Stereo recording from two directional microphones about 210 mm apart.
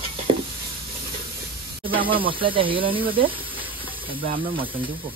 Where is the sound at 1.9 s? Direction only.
25° right (ahead or behind).